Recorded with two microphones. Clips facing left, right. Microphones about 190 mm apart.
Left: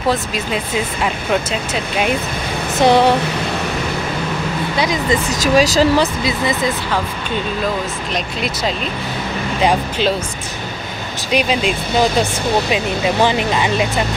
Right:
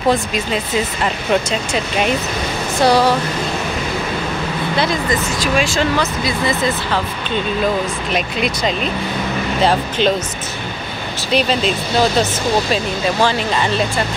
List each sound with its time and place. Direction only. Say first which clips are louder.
0.1 s speech: right 2 dB; 5° left (ahead or behind)
2.8 s speech: left 2 dB; 25° left (ahead or behind)
5.3 s speech: left 4 dB; 40° left (ahead or behind)
9.7 s speech: even; 10° left (ahead or behind)
11.3 s speech: even; 10° left (ahead or behind)